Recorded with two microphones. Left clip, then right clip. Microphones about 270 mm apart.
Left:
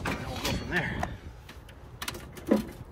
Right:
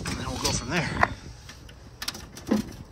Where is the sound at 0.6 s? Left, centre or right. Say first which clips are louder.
Right 2 dB; centre.